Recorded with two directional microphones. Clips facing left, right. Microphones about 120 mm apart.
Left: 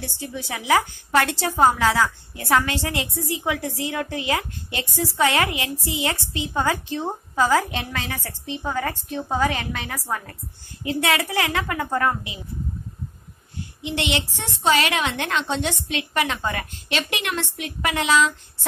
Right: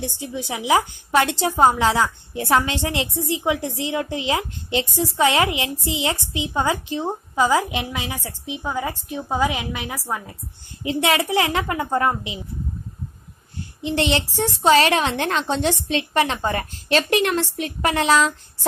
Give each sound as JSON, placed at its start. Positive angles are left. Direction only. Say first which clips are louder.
{"t": 0.0, "sound": "a woman's voice", "louder": "right 3 dB", "side_deg": -20}
{"t": 13.8, "sound": "a woman's voice", "louder": "right 4 dB", "side_deg": -35}